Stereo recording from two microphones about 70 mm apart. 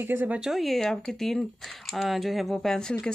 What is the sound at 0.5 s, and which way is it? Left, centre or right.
Speech, centre.